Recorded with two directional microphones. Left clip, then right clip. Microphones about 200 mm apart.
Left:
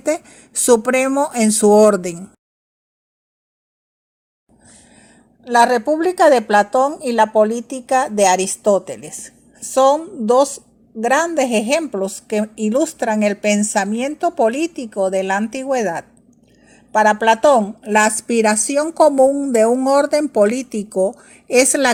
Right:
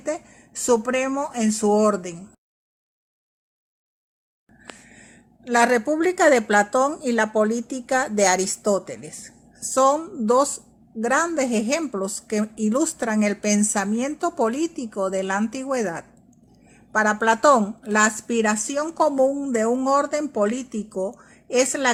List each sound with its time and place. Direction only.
0.0 s speech: 40° left (ahead or behind)
5.5 s a woman's voice: centre (ahead or behind)
17.8 s a woman's voice: 20° left (ahead or behind)
18.3 s speech: 30° left (ahead or behind)